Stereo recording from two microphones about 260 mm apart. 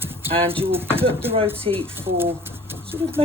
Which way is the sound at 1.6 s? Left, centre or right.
Right.